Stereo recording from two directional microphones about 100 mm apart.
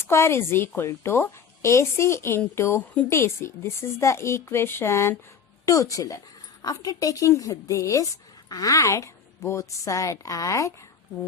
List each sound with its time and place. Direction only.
0.1 s a woman's voice: 25° left (ahead or behind)